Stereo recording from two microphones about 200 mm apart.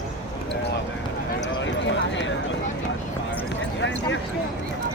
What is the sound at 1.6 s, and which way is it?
Clip-clop, 65° left (ahead or behind).